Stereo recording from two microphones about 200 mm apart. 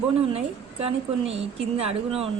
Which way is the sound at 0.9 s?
30° right (ahead or behind).